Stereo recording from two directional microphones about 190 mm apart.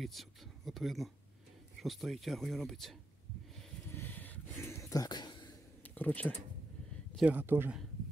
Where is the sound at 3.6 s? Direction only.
10° left (ahead or behind).